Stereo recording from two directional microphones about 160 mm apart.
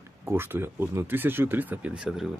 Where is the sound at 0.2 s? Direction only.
15° right (ahead or behind).